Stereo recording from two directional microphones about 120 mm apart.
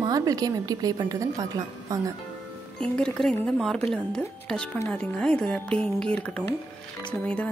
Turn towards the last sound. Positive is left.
turn(degrees=10)  # may be behind; listen again after turning